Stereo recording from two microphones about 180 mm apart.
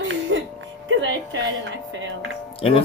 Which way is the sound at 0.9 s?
85° right.